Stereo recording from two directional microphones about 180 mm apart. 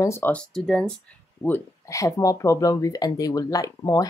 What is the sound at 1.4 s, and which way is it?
Speech, 15° left (ahead or behind).